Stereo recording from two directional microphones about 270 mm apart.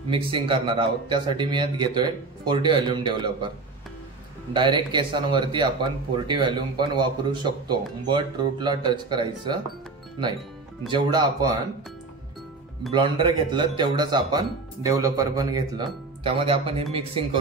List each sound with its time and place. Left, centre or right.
0.1 s speech: centre
4.6 s speech: centre
10.9 s speech: centre
12.9 s speech: centre